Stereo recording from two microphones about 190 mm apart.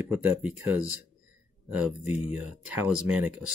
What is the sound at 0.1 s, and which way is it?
Speech, 10° right (ahead or behind).